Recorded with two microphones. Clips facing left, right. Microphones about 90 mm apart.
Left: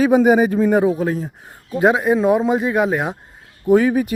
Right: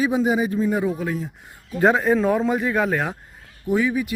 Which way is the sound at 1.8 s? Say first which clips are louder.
Left 2 dB; 10° left (ahead or behind).